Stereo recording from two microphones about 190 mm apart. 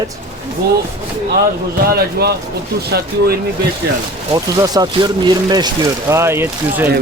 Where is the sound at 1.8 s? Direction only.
55° right (ahead or behind).